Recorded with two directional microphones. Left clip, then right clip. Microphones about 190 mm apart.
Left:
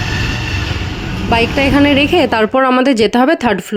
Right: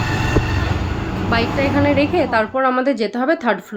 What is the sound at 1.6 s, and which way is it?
A woman's voice, 60° left (ahead or behind).